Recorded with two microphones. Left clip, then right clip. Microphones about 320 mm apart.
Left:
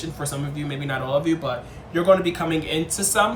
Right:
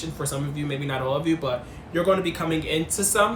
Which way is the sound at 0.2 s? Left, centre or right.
Centre.